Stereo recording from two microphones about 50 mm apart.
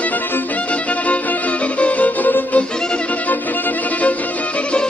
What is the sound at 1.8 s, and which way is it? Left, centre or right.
Violin, left.